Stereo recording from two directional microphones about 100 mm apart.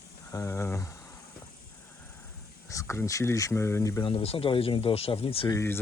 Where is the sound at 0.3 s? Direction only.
30° left (ahead or behind).